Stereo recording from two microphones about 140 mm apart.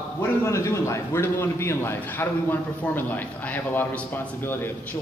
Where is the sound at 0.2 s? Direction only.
20° left (ahead or behind).